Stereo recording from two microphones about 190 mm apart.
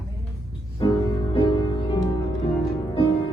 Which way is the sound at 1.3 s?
25° left (ahead or behind).